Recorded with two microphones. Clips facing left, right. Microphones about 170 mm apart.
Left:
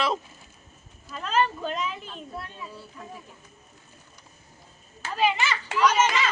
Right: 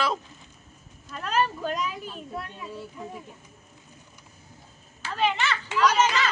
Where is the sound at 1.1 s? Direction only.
5° right (ahead or behind).